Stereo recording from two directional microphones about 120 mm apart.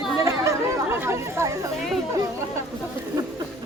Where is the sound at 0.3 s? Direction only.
25° right (ahead or behind).